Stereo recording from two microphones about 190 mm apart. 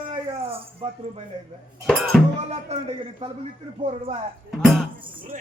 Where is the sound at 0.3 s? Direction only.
30° right (ahead or behind).